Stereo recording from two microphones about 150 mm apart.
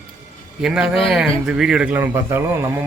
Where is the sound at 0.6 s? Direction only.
5° right (ahead or behind).